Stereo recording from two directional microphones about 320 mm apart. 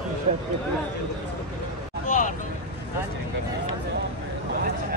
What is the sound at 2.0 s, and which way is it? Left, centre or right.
Vehicle, left.